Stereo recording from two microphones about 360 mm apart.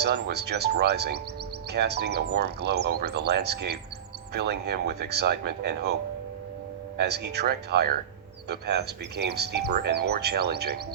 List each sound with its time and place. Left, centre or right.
0.0 s speech: right
6.9 s speech: right